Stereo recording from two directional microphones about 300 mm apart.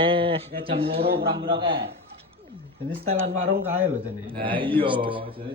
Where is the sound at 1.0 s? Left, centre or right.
Right.